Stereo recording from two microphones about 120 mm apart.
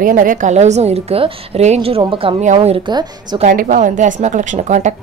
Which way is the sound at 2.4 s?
65° right (ahead or behind).